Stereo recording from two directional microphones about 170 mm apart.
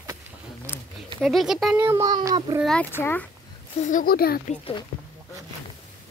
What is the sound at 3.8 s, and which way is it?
Speech, 55° left (ahead or behind).